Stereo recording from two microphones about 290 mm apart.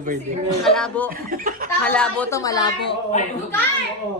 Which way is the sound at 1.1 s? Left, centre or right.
Right.